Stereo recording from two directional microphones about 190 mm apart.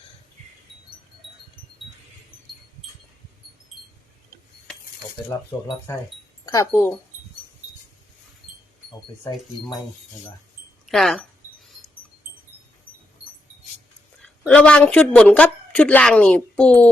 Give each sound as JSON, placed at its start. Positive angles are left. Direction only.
{"t": 5.5, "sound": "speech", "side_deg": 20}
{"t": 10.8, "sound": "a sound", "side_deg": 0}
{"t": 14.2, "sound": "a woman's voice", "side_deg": 5}